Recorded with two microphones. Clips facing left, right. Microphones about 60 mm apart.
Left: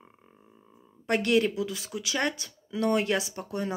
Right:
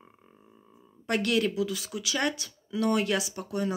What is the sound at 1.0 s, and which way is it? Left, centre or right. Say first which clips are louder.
Speech: left 2 dB; left.